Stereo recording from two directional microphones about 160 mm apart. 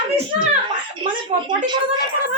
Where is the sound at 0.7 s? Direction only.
30° right (ahead or behind).